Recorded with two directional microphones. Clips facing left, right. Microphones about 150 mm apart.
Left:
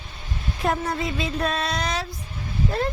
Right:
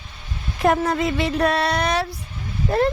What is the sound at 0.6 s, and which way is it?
Speech, 85° right.